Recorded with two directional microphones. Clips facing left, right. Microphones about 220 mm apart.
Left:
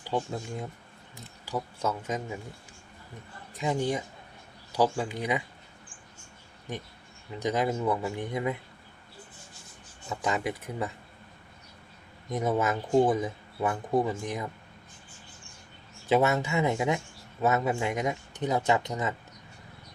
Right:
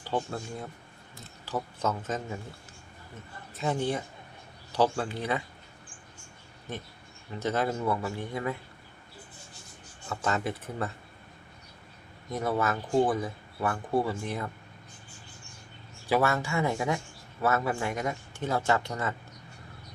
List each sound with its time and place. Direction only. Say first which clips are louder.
0.0 s speech: left 1 dB; 15° left (ahead or behind)
3.5 s speech: left 1 dB; 15° left (ahead or behind)
6.7 s speech: left 1 dB; 15° left (ahead or behind)
10.1 s speech: even; 15° left (ahead or behind)
12.3 s speech: left 2 dB; 20° left (ahead or behind)
16.0 s speech: left 2 dB; 20° left (ahead or behind)